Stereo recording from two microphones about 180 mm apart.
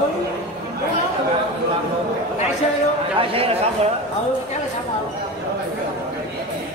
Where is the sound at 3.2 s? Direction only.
30° right (ahead or behind).